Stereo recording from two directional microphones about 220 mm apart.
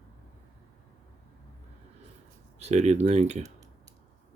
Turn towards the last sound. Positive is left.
turn(degrees=-30)  # may be behind; listen again after turning